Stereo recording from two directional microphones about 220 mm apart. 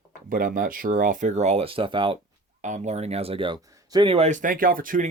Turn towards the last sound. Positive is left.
turn(degrees=-40)  # may be behind; listen again after turning